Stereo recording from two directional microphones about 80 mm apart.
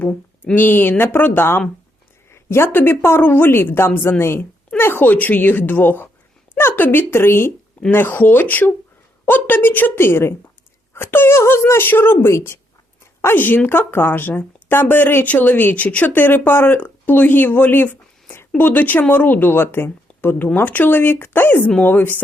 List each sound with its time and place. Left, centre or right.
0.0 s speech: centre
0.5 s speech: left